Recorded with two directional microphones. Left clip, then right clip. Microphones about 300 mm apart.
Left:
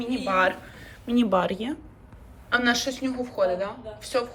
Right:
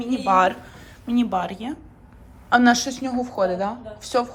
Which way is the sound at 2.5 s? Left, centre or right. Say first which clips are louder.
Right 6 dB; centre.